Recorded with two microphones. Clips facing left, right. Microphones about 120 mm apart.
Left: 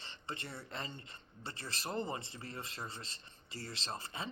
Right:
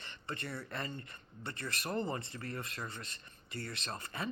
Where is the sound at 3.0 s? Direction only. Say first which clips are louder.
Right 2 dB; 60° right (ahead or behind).